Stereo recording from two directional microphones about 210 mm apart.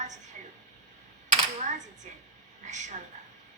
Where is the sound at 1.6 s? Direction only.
35° right (ahead or behind).